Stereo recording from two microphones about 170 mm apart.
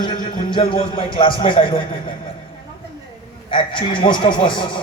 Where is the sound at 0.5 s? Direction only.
30° left (ahead or behind).